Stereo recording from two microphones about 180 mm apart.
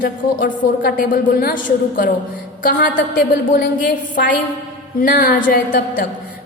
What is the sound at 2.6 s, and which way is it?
A woman's voice, 50° left (ahead or behind).